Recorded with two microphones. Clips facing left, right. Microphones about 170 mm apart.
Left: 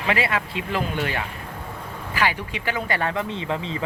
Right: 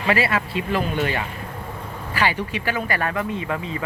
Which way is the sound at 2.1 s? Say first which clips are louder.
Right 2 dB; 20° left (ahead or behind).